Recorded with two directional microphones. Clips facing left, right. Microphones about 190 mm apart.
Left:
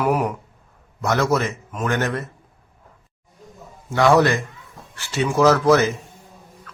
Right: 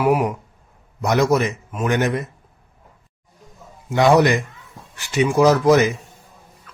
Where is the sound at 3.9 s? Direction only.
20° right (ahead or behind).